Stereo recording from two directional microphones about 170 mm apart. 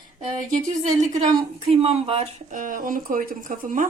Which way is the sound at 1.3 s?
35° right (ahead or behind).